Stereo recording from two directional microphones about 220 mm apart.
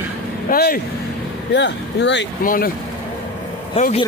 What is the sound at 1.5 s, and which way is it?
Speech, 55° left (ahead or behind).